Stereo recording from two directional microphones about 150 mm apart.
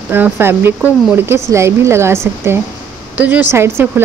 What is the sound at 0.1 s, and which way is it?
Speech, 15° right (ahead or behind).